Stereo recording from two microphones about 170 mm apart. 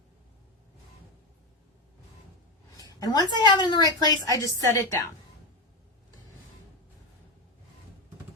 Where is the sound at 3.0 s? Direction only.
20° left (ahead or behind).